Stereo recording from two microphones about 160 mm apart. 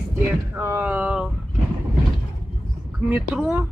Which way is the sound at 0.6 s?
15° right (ahead or behind).